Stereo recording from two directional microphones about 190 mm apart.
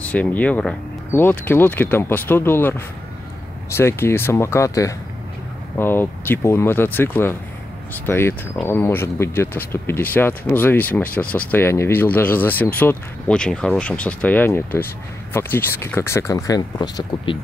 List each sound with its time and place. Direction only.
0.0 s speech: 10° left (ahead or behind)
3.7 s speech: 15° left (ahead or behind)